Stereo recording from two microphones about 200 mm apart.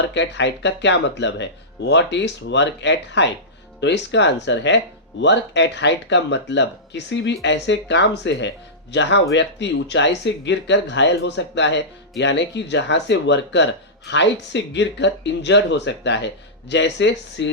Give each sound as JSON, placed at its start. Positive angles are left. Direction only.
{"t": 0.1, "sound": "speech", "side_deg": 60}